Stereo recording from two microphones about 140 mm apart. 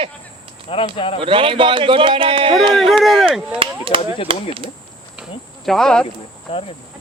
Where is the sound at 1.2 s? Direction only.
40° right (ahead or behind).